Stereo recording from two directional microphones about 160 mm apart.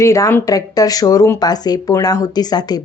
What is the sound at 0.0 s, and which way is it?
Speech, 20° left (ahead or behind).